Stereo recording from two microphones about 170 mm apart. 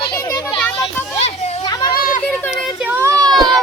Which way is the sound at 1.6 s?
25° left (ahead or behind).